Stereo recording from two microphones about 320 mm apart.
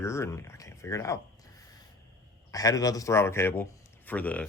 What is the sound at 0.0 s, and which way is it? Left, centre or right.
A man's voice, centre.